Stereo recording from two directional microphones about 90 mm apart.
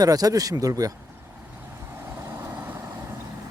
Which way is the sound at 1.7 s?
25° right (ahead or behind).